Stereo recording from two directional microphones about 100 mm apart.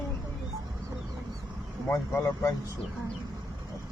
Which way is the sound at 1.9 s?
35° left (ahead or behind).